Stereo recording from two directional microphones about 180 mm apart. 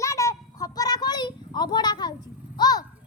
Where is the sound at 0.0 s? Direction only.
15° left (ahead or behind).